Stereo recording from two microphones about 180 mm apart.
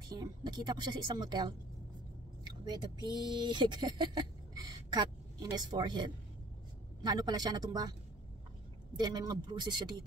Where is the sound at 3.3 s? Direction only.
25° right (ahead or behind).